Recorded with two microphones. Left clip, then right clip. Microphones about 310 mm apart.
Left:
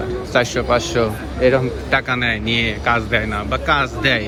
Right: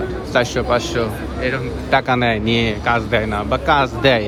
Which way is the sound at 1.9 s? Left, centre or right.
Centre.